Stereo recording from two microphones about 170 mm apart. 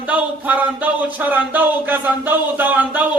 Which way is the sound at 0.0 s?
10° right (ahead or behind).